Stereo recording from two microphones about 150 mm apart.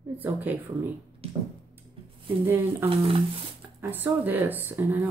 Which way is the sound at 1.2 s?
40° right (ahead or behind).